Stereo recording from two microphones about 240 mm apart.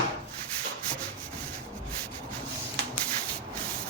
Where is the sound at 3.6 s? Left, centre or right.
Centre.